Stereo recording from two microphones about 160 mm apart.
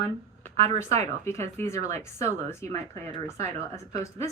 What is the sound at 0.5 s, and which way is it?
Speech, 40° right (ahead or behind).